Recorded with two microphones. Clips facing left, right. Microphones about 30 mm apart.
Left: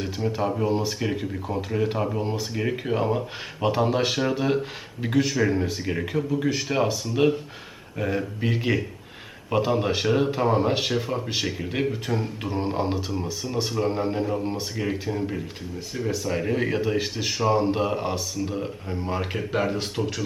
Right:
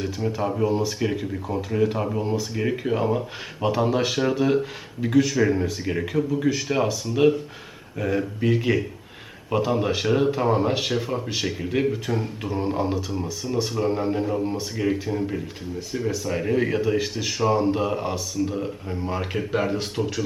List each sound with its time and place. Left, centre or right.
0.0 s speech: centre
2.2 s speech: centre
2.6 s speech: centre
12.5 s a sound: centre
13.4 s speech: centre